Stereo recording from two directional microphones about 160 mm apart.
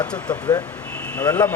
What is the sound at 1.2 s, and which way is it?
Speech, 15° left (ahead or behind).